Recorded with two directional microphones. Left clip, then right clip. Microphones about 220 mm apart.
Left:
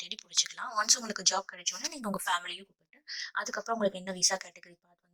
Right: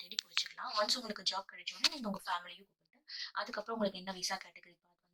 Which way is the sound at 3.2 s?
40° left (ahead or behind).